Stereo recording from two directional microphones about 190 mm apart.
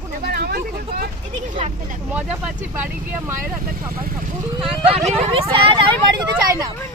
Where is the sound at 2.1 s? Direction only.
5° right (ahead or behind).